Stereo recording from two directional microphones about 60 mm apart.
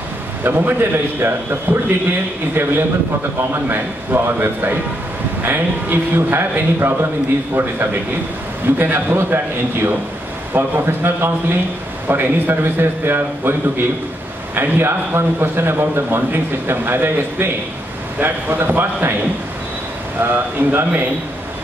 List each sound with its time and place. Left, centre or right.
0.4 s a man's voice: right
3.3 s a man's voice: right
20.2 s a man's voice: right